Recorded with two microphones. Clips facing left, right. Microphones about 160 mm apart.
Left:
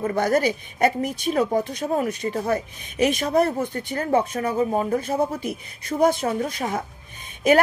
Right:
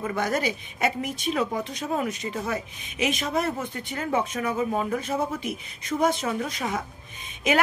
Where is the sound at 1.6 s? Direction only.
55° left (ahead or behind).